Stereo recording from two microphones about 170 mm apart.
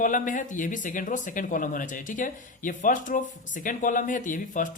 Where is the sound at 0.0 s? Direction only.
50° left (ahead or behind).